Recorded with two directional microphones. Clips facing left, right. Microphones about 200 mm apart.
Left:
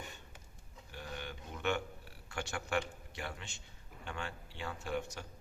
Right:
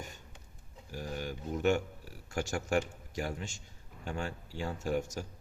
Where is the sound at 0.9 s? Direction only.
40° right (ahead or behind).